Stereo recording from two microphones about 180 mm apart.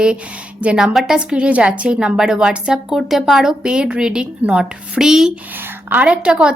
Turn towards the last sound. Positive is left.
turn(degrees=-5)  # may be behind; listen again after turning